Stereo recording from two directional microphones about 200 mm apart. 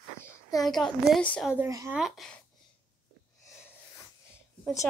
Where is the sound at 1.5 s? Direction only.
10° right (ahead or behind).